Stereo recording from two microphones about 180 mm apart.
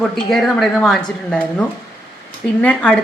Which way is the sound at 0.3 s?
Centre (ahead or behind).